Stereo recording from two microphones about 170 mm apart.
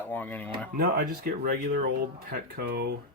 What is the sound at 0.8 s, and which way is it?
Speech, 60° right (ahead or behind).